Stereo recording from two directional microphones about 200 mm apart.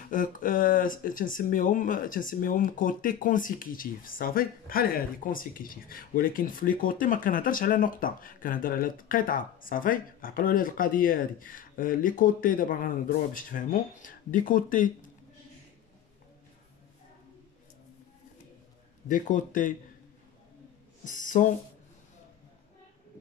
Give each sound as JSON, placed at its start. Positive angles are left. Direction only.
{"t": 0.1, "sound": "speech", "side_deg": 40}
{"t": 19.0, "sound": "speech", "side_deg": 40}
{"t": 21.0, "sound": "speech", "side_deg": 40}